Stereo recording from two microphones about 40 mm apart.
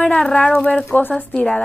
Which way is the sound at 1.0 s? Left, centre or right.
Left.